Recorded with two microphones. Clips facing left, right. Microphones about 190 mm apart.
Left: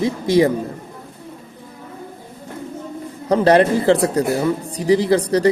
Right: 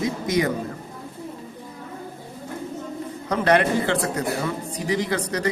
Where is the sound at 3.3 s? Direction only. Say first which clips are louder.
Left 6 dB; 30° left (ahead or behind).